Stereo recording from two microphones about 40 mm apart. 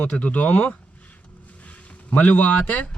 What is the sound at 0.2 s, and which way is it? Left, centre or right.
Speech, left.